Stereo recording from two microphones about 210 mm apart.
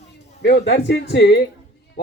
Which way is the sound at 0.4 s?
55° left (ahead or behind).